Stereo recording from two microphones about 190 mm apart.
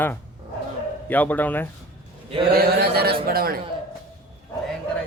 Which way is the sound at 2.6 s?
55° right (ahead or behind).